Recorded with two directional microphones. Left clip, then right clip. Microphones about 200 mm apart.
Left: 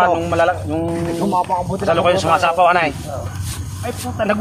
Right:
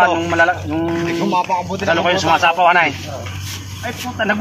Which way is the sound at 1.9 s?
20° left (ahead or behind).